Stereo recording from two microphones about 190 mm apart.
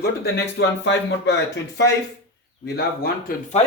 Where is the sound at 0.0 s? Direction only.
65° left (ahead or behind).